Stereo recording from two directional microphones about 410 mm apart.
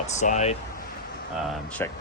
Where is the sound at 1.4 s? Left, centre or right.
Centre.